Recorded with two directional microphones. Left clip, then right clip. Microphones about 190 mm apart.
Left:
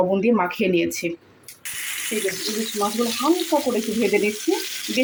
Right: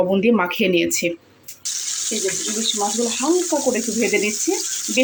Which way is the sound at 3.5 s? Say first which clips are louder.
Left 1 dB; 20° right (ahead or behind).